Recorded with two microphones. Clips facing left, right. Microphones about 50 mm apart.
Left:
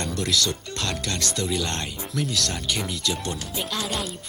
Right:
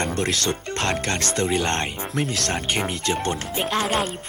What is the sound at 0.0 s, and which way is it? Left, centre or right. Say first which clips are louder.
Speech: right 2 dB; right.